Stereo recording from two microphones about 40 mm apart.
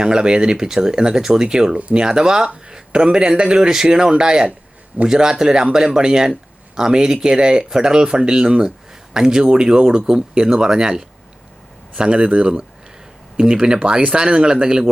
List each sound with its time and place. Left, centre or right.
0.0 s speech: right